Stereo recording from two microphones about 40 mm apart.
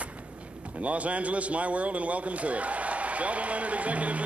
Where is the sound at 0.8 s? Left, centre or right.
Right.